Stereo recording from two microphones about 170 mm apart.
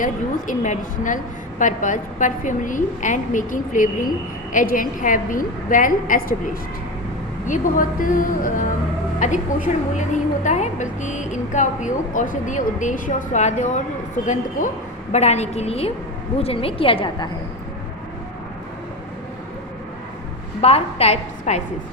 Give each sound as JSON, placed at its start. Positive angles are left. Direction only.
{"t": 0.0, "sound": "a woman's voice", "side_deg": 50}
{"t": 15.1, "sound": "a woman's voice", "side_deg": 40}
{"t": 20.6, "sound": "a woman's voice", "side_deg": 35}